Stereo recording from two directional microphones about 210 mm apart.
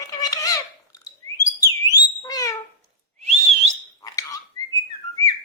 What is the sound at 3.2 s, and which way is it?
Whistling, 30° right (ahead or behind).